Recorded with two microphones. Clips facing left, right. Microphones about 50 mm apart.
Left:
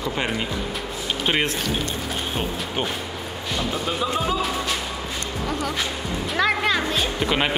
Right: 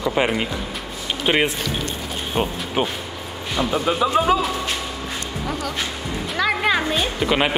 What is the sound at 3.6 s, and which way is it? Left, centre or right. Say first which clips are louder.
Speech: right 7 dB; centre.